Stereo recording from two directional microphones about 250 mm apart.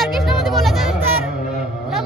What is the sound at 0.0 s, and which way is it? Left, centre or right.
Music, centre.